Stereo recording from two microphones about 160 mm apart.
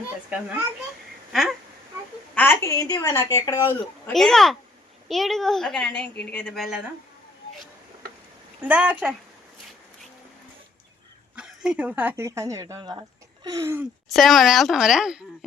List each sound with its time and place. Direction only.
0.3 s speech: 5° right (ahead or behind)
1.3 s a sound: centre (ahead or behind)
2.3 s a woman's voice: 10° left (ahead or behind)
4.1 s a woman's voice: centre (ahead or behind)
8.6 s speech: 10° right (ahead or behind)
11.3 s speech: 5° right (ahead or behind)
14.1 s a woman's voice: centre (ahead or behind)